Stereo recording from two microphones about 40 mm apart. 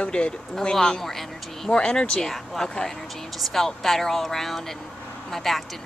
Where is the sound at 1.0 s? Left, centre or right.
Centre.